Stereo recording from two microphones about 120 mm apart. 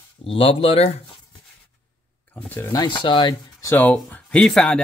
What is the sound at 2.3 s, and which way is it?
Speech, 15° left (ahead or behind).